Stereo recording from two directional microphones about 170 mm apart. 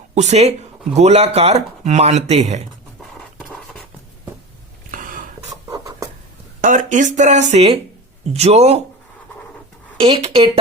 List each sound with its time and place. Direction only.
0.1 s speech: 40° right (ahead or behind)
3.0 s a sound: 5° left (ahead or behind)
4.9 s a sound: 50° right (ahead or behind)
5.5 s writing: 20° right (ahead or behind)
6.6 s speech: 45° right (ahead or behind)
10.0 s speech: 30° right (ahead or behind)